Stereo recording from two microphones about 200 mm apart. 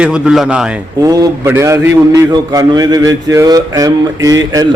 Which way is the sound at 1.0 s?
20° right (ahead or behind).